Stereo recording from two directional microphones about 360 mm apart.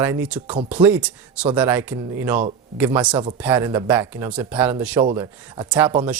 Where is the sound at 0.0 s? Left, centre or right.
Centre.